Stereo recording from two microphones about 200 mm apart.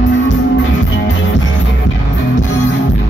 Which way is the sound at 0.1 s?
65° left (ahead or behind).